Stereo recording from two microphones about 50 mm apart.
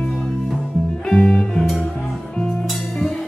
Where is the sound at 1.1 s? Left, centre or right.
Centre.